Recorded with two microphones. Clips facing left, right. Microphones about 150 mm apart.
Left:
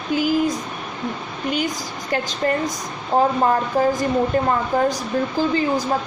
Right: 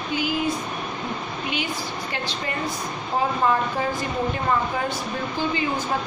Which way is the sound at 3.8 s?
40° left (ahead or behind).